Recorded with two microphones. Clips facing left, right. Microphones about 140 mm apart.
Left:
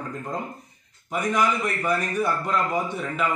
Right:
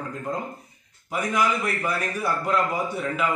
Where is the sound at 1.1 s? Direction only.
5° right (ahead or behind).